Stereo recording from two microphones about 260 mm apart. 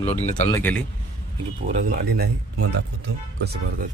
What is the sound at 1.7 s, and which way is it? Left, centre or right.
Speech, right.